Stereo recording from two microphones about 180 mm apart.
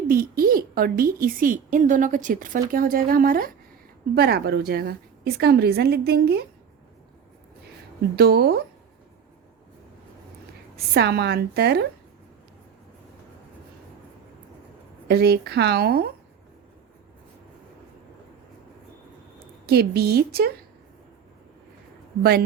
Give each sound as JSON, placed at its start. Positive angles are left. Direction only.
{"t": 0.1, "sound": "a woman's voice", "side_deg": -55}
{"t": 8.1, "sound": "a woman's voice", "side_deg": -65}
{"t": 10.9, "sound": "a woman's voice", "side_deg": -70}
{"t": 15.0, "sound": "a woman's voice", "side_deg": -60}
{"t": 19.6, "sound": "a woman's voice", "side_deg": -60}
{"t": 22.2, "sound": "a woman's voice", "side_deg": -60}